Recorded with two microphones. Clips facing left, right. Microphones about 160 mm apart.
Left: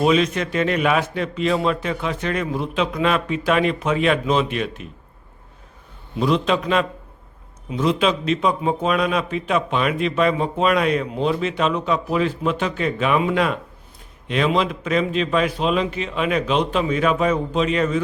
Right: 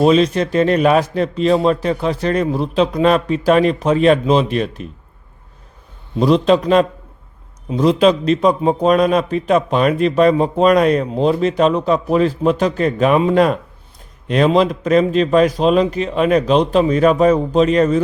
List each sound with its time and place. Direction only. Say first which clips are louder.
0.0 s a man's voice: right 5 dB; 35° right (ahead or behind)
6.1 s a man's voice: right 7 dB; 35° right (ahead or behind)